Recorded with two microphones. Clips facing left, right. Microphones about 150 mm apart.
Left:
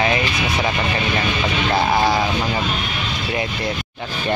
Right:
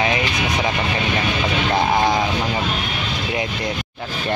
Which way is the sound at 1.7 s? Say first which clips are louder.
Left 1 dB; 5° left (ahead or behind).